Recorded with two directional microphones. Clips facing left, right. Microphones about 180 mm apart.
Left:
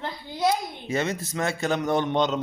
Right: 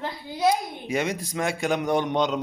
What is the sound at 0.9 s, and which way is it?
A man's voice, 10° right (ahead or behind).